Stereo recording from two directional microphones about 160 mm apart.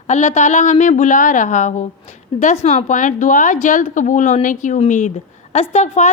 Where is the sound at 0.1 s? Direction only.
45° left (ahead or behind).